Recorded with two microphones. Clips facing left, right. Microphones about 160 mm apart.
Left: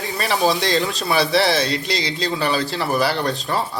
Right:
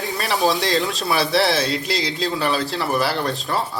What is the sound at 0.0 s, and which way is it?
Speech, centre (ahead or behind).